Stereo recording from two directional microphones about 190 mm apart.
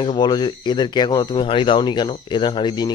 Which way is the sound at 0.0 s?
25° left (ahead or behind).